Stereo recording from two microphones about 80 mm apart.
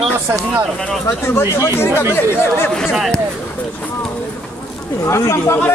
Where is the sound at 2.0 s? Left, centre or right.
Left.